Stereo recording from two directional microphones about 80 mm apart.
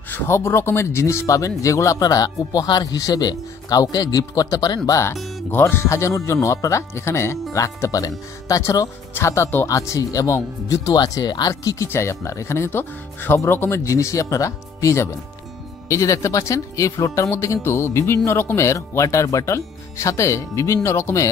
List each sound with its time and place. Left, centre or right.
0.1 s speech: left
5.5 s speech: left
11.9 s speech: left